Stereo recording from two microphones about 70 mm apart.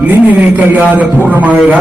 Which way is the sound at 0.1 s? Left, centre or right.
Right.